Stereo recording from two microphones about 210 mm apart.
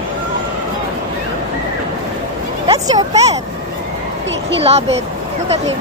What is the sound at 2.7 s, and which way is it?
Speech, 30° right (ahead or behind).